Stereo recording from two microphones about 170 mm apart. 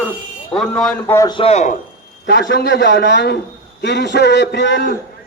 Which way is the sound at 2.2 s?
80° left.